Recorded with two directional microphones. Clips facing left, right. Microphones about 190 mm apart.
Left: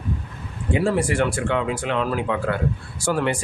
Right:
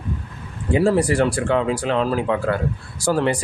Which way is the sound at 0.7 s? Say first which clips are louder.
Right 4 dB; 35° right (ahead or behind).